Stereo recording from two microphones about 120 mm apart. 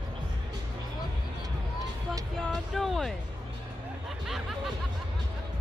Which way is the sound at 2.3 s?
5° left (ahead or behind).